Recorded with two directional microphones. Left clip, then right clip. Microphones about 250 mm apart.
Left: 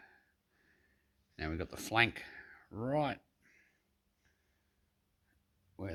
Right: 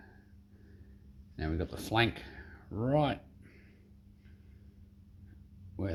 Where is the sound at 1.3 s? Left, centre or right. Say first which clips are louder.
Right 3 dB; left.